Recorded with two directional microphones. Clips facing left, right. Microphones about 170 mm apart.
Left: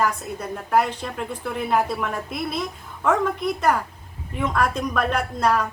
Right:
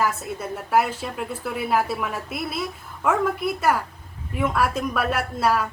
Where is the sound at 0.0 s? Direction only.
5° right (ahead or behind).